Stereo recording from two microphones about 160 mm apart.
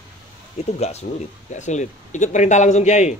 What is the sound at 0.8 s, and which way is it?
A man's voice, 45° left (ahead or behind).